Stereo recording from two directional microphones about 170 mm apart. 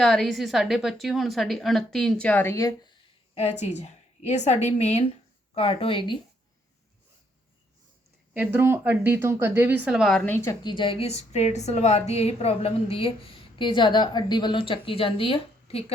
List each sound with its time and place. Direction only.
0.0 s a woman's voice: centre (ahead or behind); by 2.9 s 20° left (ahead or behind)
3.3 s a woman's voice: 40° left (ahead or behind)
8.3 s a woman's voice: 10° right (ahead or behind); by 15.8 s 35° left (ahead or behind)